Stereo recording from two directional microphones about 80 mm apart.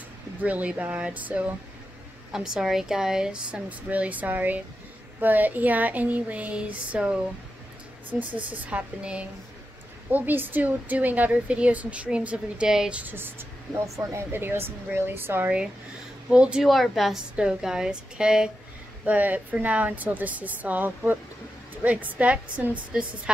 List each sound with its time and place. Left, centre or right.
0.4 s speech: centre
2.3 s a woman's voice: centre
13.0 s a woman's voice: right
13.8 s speech: right
14.3 s speech: right
16.3 s a woman's voice: centre
16.6 s a woman's voice: centre